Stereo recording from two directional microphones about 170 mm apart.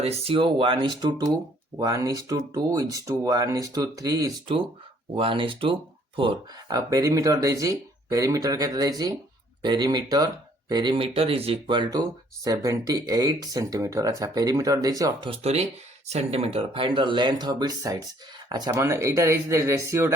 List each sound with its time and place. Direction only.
0.0 s speech: 35° right (ahead or behind)
15.3 s speech: 40° right (ahead or behind); by 20.1 s 15° right (ahead or behind)